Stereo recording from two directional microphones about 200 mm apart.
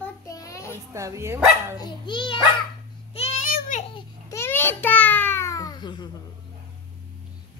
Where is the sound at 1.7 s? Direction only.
20° left (ahead or behind).